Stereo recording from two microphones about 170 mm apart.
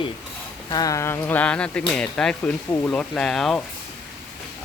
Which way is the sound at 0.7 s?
20° left (ahead or behind).